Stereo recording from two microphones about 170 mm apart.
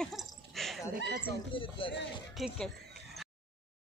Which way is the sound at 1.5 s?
30° left (ahead or behind).